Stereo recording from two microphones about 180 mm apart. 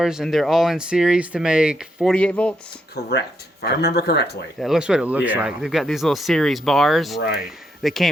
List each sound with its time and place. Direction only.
0.0 s speech: centre (ahead or behind)
2.9 s speech: 65° left (ahead or behind)
4.6 s speech: 5° right (ahead or behind)